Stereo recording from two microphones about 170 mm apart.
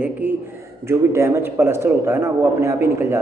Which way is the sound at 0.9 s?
15° right (ahead or behind).